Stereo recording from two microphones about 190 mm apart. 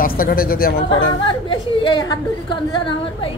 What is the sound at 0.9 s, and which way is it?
Speech, 25° left (ahead or behind).